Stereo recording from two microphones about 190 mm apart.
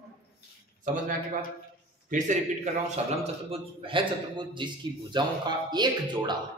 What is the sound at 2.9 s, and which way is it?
A man's voice, 30° right (ahead or behind).